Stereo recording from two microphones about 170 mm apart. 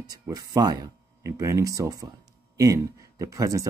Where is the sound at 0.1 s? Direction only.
25° right (ahead or behind).